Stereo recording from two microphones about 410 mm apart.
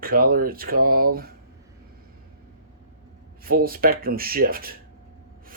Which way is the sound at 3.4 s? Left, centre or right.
Right.